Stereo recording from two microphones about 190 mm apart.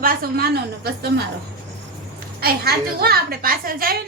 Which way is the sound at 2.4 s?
55° right (ahead or behind).